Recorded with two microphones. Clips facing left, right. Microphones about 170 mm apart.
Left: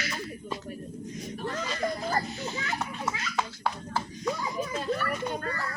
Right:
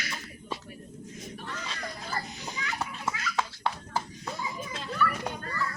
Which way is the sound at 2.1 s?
40° left (ahead or behind).